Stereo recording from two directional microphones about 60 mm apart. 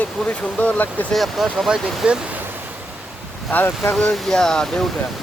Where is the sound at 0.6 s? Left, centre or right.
Left.